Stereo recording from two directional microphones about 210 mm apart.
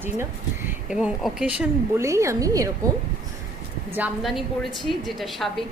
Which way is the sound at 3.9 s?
5° right (ahead or behind).